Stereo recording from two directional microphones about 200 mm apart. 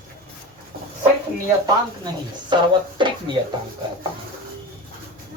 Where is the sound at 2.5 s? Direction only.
25° right (ahead or behind).